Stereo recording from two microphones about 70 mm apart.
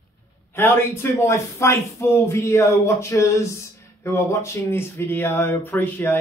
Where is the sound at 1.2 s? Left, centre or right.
Left.